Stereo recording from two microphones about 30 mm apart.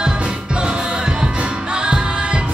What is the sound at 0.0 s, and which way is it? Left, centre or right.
Music, right.